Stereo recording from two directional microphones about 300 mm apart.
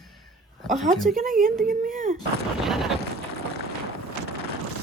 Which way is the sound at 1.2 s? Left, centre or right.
Right.